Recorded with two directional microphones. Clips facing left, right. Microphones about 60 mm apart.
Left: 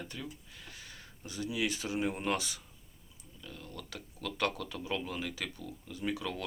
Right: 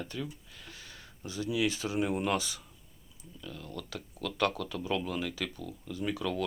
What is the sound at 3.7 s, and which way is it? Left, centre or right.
Speech, left.